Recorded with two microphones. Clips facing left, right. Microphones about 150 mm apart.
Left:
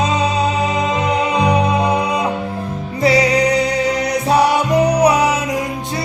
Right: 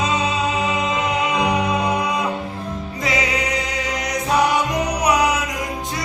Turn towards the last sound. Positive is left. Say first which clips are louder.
# left 5 dB
turn(degrees=30)  # may be behind; listen again after turning